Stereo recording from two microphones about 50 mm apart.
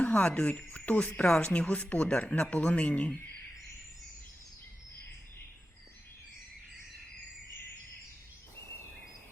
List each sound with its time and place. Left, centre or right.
0.0 s speech: left